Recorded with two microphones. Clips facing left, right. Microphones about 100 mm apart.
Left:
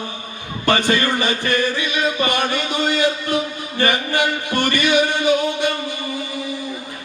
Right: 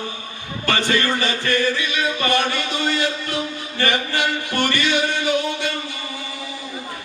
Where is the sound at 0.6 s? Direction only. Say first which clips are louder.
Left 3 dB; 20° left (ahead or behind).